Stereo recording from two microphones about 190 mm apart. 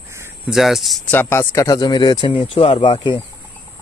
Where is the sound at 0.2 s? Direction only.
5° right (ahead or behind).